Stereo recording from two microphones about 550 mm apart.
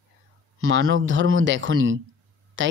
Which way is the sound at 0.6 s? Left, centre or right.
Right.